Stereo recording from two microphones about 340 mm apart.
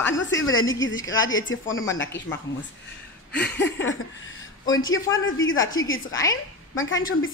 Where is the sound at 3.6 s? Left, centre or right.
Left.